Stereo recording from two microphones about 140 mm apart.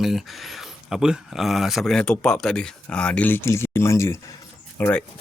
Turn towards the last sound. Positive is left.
turn(degrees=10)  # may be behind; listen again after turning